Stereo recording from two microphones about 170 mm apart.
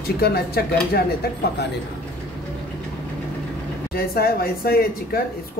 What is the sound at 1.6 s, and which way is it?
Speech, 75° left (ahead or behind).